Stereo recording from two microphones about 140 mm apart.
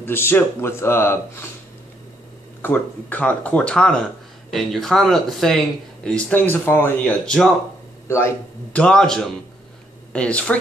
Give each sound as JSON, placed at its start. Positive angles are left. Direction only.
{"t": 0.0, "sound": "speech", "side_deg": 15}
{"t": 2.6, "sound": "speech", "side_deg": 10}
{"t": 8.1, "sound": "speech", "side_deg": 20}
{"t": 8.7, "sound": "speech", "side_deg": 5}